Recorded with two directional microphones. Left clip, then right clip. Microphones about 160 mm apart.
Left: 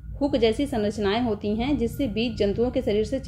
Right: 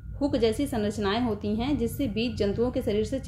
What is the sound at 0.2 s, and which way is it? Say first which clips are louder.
A woman's voice: left 3 dB; 5° left (ahead or behind).